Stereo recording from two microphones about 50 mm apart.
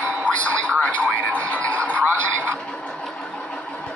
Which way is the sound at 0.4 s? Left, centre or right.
Left.